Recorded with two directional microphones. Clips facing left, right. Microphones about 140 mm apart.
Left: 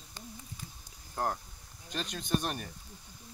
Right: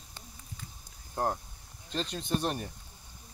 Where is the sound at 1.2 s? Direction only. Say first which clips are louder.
Right 2 dB; 20° right (ahead or behind).